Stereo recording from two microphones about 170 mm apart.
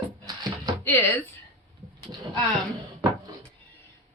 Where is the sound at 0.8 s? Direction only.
10° left (ahead or behind).